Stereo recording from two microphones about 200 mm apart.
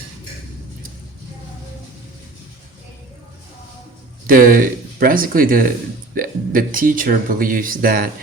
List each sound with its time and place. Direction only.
4.3 s speech: 45° right (ahead or behind)